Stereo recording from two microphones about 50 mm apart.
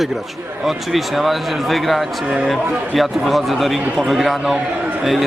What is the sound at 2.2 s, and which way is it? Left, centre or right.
Speech, centre.